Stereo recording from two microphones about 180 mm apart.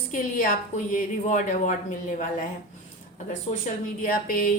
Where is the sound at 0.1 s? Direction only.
50° left (ahead or behind).